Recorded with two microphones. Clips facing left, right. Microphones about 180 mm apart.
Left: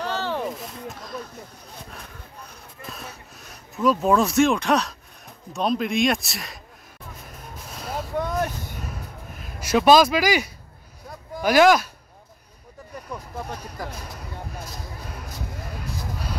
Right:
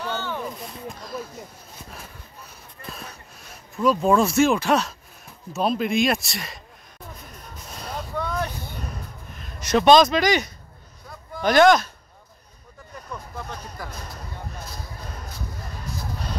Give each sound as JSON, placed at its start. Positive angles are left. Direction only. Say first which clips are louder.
{"t": 0.0, "sound": "a sound", "louder": "left 3 dB", "side_deg": 30}
{"t": 0.6, "sound": "a sound", "louder": "even", "side_deg": 0}
{"t": 1.9, "sound": "speech", "louder": "even", "side_deg": 0}
{"t": 7.5, "sound": "vehicle", "louder": "left 2 dB", "side_deg": 0}
{"t": 8.2, "sound": "vehicle", "louder": "left 2 dB", "side_deg": 45}
{"t": 9.4, "sound": "speech", "louder": "even", "side_deg": 5}
{"t": 13.5, "sound": "speech", "louder": "left 2 dB", "side_deg": 35}